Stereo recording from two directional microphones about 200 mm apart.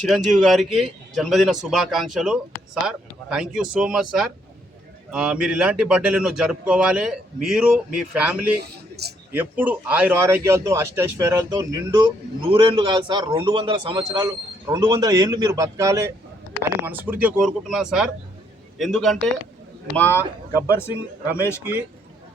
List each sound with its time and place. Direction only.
0.0 s speech: centre (ahead or behind)
8.5 s a man's voice: 55° right (ahead or behind)
9.3 s speech: 10° right (ahead or behind)
20.0 s speech: 10° left (ahead or behind)